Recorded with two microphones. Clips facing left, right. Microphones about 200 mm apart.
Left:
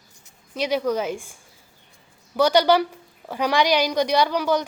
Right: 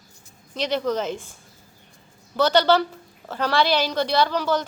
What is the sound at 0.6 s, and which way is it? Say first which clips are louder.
Speech: left 1 dB; 10° left (ahead or behind).